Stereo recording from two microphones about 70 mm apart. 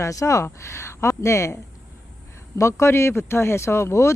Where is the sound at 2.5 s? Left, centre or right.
Left.